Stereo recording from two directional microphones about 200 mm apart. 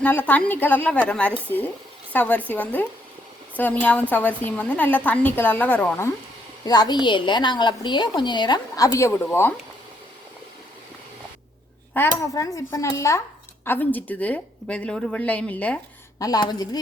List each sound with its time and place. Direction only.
0.0 s a woman's voice: 10° left (ahead or behind)
6.7 s a woman's voice: 20° left (ahead or behind)
11.9 s a woman's voice: 15° left (ahead or behind)
16.1 s a woman's voice: 20° left (ahead or behind)